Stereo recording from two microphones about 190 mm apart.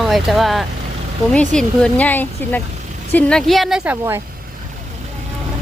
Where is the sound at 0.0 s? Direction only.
Centre (ahead or behind).